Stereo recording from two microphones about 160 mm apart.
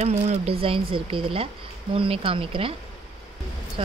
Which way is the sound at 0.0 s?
40° right (ahead or behind).